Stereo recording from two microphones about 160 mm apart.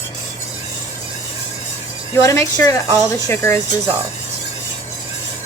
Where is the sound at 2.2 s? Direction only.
20° left (ahead or behind).